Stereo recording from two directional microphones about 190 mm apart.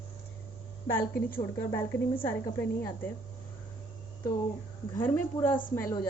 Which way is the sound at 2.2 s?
10° left (ahead or behind).